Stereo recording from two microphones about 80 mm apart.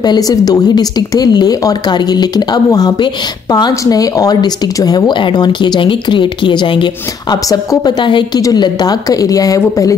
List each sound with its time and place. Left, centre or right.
0.0 s a woman's voice: left
8.5 s a woman's voice: left